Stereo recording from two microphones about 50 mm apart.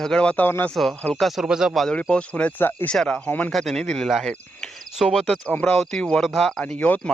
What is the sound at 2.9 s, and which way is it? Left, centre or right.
Speech, centre.